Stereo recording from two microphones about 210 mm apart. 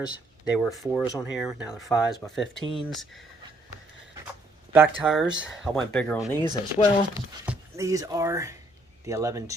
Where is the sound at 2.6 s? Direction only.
25° left (ahead or behind).